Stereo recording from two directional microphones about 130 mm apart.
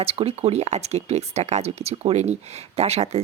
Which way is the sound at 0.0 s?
50° right (ahead or behind).